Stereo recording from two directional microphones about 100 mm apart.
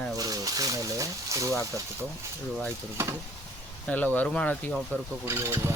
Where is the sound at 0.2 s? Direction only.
40° right (ahead or behind).